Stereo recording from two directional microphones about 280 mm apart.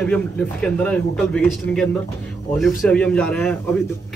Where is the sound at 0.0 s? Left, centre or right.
Centre.